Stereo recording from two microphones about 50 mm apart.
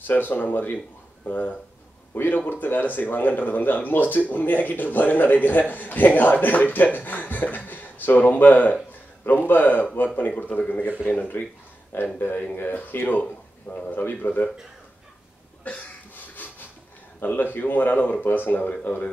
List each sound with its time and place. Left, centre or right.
0.0 s speech: left
15.7 s speech: left
17.2 s speech: left